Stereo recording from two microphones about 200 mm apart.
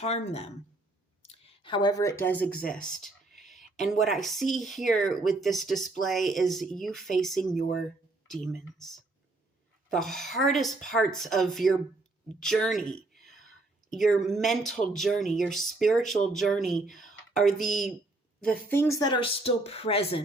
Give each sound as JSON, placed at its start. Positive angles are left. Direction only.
{"t": 0.0, "sound": "a woman's voice", "side_deg": 35}
{"t": 9.9, "sound": "speech", "side_deg": 0}